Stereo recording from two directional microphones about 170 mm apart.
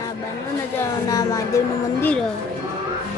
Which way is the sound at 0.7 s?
20° left (ahead or behind).